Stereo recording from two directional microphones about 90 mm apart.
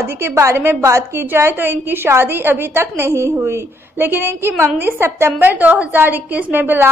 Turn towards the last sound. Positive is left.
turn(degrees=-20)  # may be behind; listen again after turning